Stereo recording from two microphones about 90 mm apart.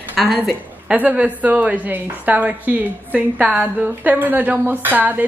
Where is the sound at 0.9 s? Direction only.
15° right (ahead or behind).